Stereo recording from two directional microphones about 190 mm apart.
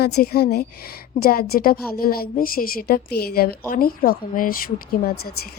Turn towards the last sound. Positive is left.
turn(degrees=50)  # may be behind; listen again after turning